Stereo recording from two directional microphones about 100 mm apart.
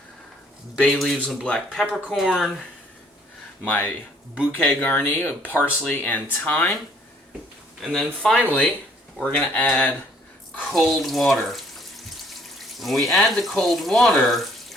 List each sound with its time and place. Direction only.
0.8 s speech: 5° left (ahead or behind)
3.7 s speech: 15° left (ahead or behind)
7.8 s speech: 5° left (ahead or behind)
9.3 s speech: 15° left (ahead or behind)
10.7 s water tap: centre (ahead or behind)
13.1 s speech: 5° left (ahead or behind)